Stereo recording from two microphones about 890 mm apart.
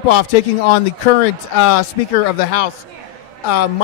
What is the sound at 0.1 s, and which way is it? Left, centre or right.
Speech, left.